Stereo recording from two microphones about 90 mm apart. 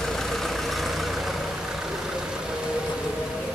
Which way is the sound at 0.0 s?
5° left (ahead or behind).